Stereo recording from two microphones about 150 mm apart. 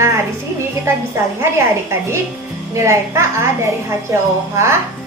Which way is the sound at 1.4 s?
15° right (ahead or behind).